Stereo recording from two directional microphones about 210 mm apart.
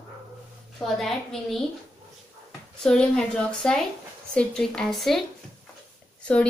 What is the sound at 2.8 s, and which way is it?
Child singing, 5° left (ahead or behind).